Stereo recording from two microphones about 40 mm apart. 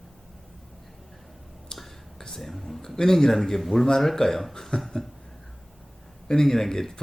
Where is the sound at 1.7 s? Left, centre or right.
Centre.